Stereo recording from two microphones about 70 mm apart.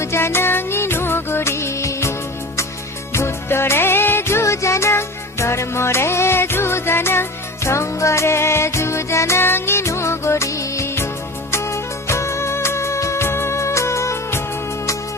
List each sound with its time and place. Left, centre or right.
0.0 s music: left